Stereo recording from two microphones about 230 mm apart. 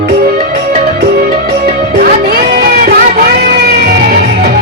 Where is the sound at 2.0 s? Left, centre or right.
Right.